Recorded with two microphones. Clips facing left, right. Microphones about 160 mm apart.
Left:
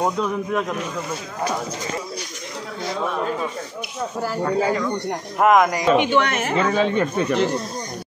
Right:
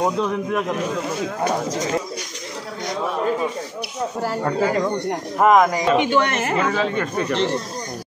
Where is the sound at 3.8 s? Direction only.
30° right (ahead or behind).